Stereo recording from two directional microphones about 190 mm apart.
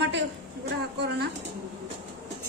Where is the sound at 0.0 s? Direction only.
70° right (ahead or behind).